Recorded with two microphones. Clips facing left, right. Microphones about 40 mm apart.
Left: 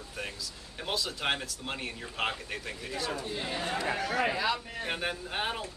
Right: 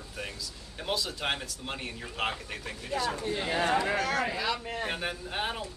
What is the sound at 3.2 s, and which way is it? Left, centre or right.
Speech, right.